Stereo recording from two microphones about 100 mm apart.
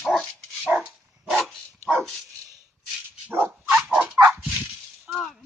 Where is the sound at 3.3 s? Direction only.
20° right (ahead or behind).